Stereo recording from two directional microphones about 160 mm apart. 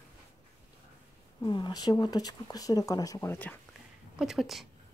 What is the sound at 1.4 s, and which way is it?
Speech, 25° left (ahead or behind).